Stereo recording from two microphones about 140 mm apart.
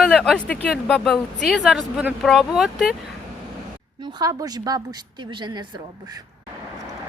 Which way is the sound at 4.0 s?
30° right (ahead or behind).